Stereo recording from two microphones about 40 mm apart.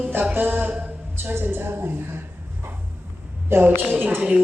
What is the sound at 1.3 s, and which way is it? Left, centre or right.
Speech, right.